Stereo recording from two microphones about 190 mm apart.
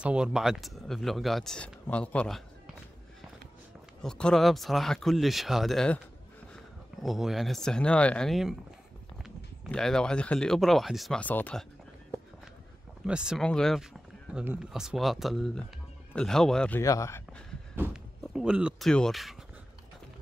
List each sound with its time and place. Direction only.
0.0 s speech: 5° right (ahead or behind)
4.0 s speech: 5° left (ahead or behind)
7.0 s speech: centre (ahead or behind)
13.0 s speech: 5° right (ahead or behind)
16.8 s speech: 15° left (ahead or behind)
17.8 s speech: 10° right (ahead or behind)